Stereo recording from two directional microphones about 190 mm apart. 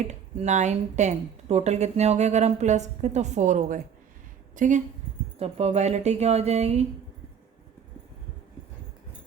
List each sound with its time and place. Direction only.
0.0 s a woman's voice: 35° right (ahead or behind)